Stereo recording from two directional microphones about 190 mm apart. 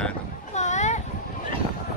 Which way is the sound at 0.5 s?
40° left (ahead or behind).